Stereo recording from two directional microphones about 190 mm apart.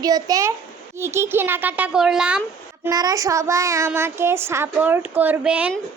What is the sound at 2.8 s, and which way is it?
A woman's voice, 20° right (ahead or behind).